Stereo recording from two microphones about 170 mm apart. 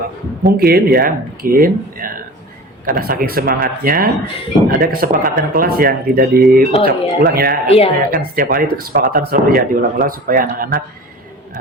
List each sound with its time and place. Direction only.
0.4 s speech: 65° right (ahead or behind)
6.7 s speech: 35° left (ahead or behind)
7.2 s speech: 65° right (ahead or behind)
7.7 s speech: 35° left (ahead or behind)
8.1 s speech: 55° right (ahead or behind)